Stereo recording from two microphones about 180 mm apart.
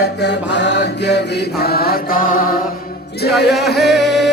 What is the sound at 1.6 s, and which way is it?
Mantra, 60° left (ahead or behind).